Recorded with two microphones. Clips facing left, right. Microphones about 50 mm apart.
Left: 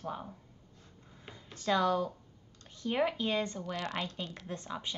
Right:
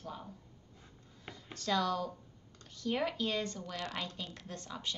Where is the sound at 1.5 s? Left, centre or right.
Left.